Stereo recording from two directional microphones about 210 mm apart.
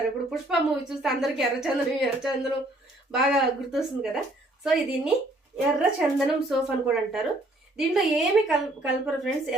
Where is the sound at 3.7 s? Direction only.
Centre (ahead or behind).